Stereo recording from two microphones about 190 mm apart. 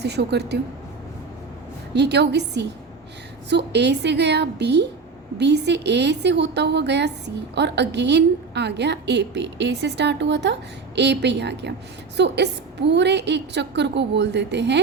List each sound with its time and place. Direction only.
0.0 s a woman's voice: 60° right (ahead or behind)
1.9 s a woman's voice: 60° right (ahead or behind)